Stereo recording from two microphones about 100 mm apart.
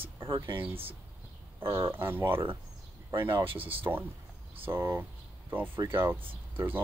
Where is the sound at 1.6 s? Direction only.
65° right (ahead or behind).